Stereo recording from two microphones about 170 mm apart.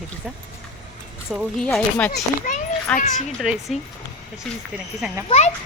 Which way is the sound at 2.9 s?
5° left (ahead or behind).